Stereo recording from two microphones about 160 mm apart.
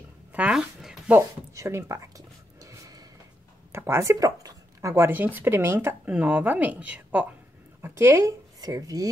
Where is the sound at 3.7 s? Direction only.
15° right (ahead or behind).